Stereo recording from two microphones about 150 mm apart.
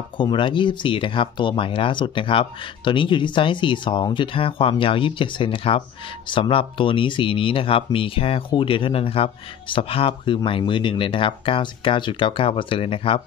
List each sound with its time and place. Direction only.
0.2 s speech: 30° left (ahead or behind)